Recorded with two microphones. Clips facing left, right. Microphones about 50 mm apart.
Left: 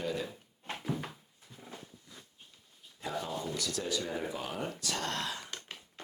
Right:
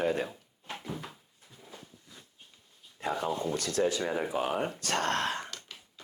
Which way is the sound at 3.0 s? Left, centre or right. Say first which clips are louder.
Right 5 dB; right.